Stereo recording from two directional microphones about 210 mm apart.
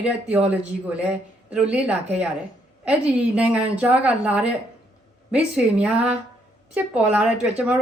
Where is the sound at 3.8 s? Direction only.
5° right (ahead or behind).